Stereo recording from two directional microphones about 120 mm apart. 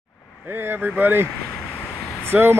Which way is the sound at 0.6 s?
15° right (ahead or behind).